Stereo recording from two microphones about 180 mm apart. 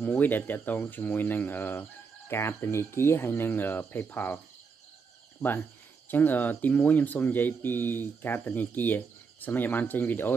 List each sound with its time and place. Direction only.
0.0 s speech: 10° left (ahead or behind)
5.4 s speech: 20° left (ahead or behind)